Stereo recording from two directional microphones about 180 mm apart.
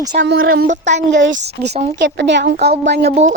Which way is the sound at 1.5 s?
70° right (ahead or behind).